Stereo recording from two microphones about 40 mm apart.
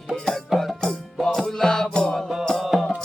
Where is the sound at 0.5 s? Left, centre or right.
Centre.